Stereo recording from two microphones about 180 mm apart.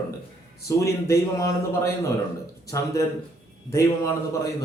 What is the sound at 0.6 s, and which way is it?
Speech, 15° left (ahead or behind).